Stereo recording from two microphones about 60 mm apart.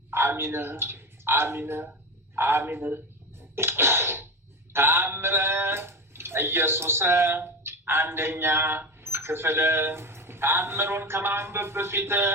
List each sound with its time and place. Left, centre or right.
0.1 s a man's voice: right
3.5 s a sound: right
4.7 s a man's voice: right